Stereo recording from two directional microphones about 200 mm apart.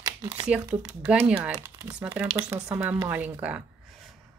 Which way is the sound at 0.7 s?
15° right (ahead or behind).